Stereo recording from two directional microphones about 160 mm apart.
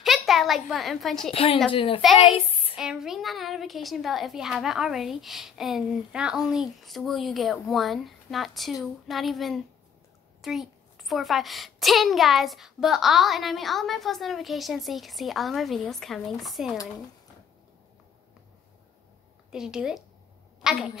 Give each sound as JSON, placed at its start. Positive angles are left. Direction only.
{"t": 0.0, "sound": "a child's voice", "side_deg": 0}
{"t": 1.3, "sound": "a woman's voice", "side_deg": 35}
{"t": 2.7, "sound": "a child's voice", "side_deg": -5}
{"t": 19.5, "sound": "a child's voice", "side_deg": -5}